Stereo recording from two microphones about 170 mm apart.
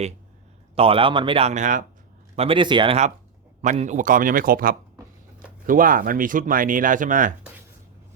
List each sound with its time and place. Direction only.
0.8 s speech: 30° right (ahead or behind)
2.3 s speech: 35° right (ahead or behind)
3.6 s speech: 45° right (ahead or behind)